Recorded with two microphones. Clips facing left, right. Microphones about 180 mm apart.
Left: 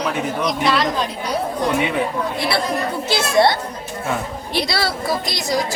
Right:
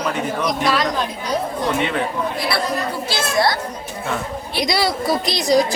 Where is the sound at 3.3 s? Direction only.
25° left (ahead or behind).